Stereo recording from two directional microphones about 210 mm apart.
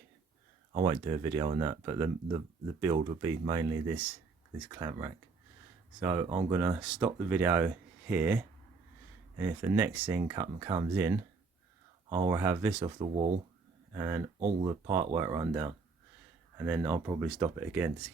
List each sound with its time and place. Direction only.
0.9 s speech: 15° right (ahead or behind)
12.8 s speech: 25° right (ahead or behind)
14.3 s speech: 30° right (ahead or behind)
14.8 s speech: 15° right (ahead or behind)